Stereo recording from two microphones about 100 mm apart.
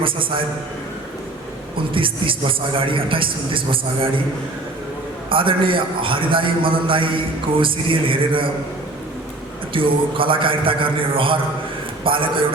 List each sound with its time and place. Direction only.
1.9 s a man's voice: 60° right (ahead or behind)
5.3 s a man's voice: 60° right (ahead or behind)
9.7 s a man's voice: 60° right (ahead or behind)